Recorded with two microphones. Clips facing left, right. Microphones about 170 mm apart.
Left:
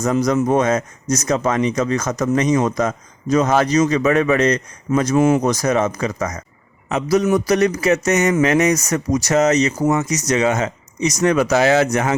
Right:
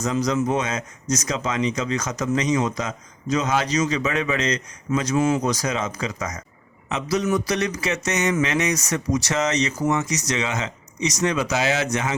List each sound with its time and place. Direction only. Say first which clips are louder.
0.0 s speech: left 5 dB; 50° left (ahead or behind)